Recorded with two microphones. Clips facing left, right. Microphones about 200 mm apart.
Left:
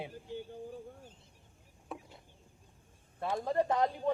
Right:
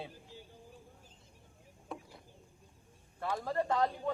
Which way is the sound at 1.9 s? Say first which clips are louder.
Even; centre (ahead or behind).